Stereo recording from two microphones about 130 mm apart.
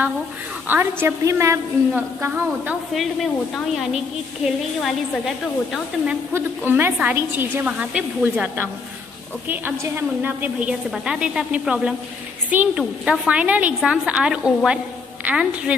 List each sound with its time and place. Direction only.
0.7 s a woman's voice: 15° right (ahead or behind)
2.9 s a woman's voice: centre (ahead or behind)
6.3 s a woman's voice: 15° right (ahead or behind)